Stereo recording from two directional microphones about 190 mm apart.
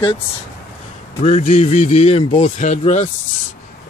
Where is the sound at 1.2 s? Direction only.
40° left (ahead or behind).